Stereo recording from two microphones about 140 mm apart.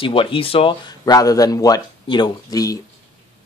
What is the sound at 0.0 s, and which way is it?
Speech, 40° left (ahead or behind).